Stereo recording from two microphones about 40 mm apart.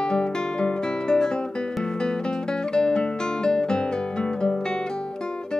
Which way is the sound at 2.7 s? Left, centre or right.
Centre.